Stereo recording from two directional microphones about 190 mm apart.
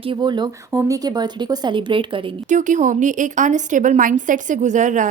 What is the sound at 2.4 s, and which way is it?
Speech, 40° right (ahead or behind).